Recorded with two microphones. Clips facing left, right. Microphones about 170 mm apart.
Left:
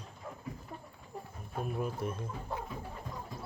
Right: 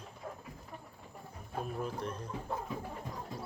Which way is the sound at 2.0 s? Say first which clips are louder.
Left 2 dB; 10° left (ahead or behind).